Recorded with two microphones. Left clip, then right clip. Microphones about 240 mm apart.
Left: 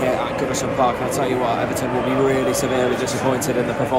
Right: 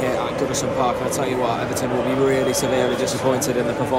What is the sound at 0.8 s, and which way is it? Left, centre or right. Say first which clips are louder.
Speech: left 4 dB; centre.